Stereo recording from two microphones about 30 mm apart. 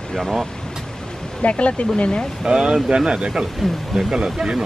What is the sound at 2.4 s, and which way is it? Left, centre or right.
Speech, right.